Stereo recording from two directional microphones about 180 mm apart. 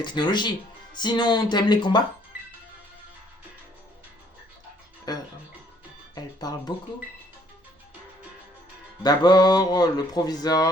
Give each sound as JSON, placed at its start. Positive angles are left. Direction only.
{"t": 0.0, "sound": "speech", "side_deg": 25}
{"t": 5.1, "sound": "music", "side_deg": 20}
{"t": 9.0, "sound": "speech", "side_deg": 25}